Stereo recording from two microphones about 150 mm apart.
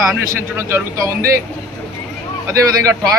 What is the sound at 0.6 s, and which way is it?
Speech, 15° right (ahead or behind).